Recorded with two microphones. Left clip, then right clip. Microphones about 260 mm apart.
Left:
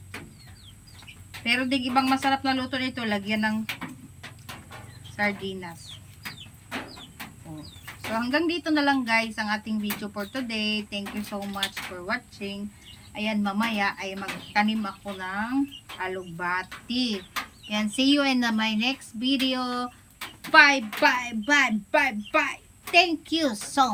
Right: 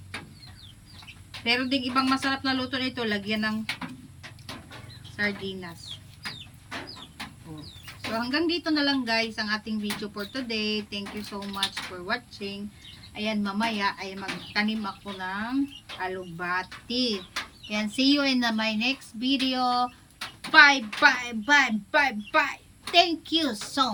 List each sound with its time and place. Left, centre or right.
1.5 s speech: centre
5.1 s speech: centre
8.2 s speech: centre
12.0 s speech: centre